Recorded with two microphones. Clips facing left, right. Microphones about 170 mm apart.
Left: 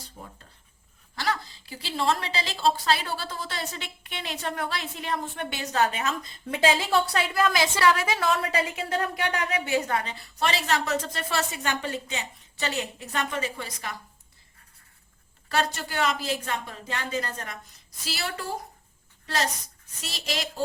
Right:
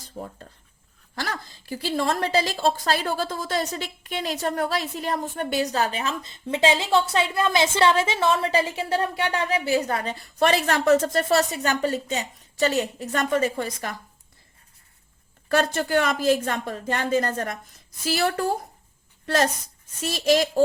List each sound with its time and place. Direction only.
1.1 s a woman's voice: 50° right (ahead or behind)
10.4 s a woman's voice: 50° right (ahead or behind)
15.4 s a woman's voice: 50° right (ahead or behind)